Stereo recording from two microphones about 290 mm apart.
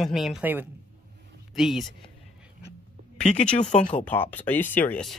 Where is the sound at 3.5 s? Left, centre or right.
Left.